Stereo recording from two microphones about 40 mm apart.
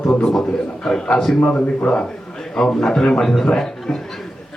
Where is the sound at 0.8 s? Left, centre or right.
Centre.